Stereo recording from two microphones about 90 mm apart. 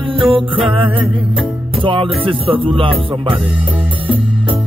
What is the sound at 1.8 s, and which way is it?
Music, 70° right (ahead or behind).